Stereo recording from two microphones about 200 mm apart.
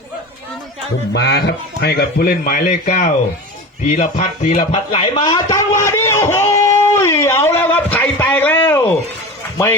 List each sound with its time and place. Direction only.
1.1 s speech: 60° left (ahead or behind); by 3.1 s 35° left (ahead or behind)
3.8 s music: 35° left (ahead or behind)
4.7 s a sound: 30° left (ahead or behind); by 9.0 s 10° left (ahead or behind)